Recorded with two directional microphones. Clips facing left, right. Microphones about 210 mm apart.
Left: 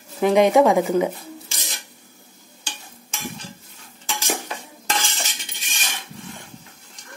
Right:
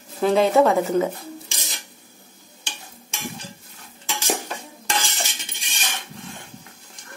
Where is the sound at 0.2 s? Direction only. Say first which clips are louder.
Left 2 dB; 15° left (ahead or behind).